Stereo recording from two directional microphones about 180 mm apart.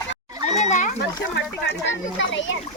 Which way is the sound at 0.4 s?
40° left (ahead or behind).